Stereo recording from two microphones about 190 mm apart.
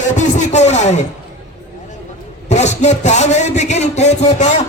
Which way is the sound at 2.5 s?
35° left (ahead or behind).